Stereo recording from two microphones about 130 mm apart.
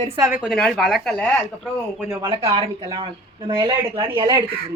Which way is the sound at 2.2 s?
45° right (ahead or behind).